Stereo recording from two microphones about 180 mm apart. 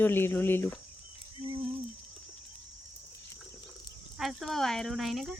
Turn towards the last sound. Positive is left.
turn(degrees=0)  # may be behind; listen again after turning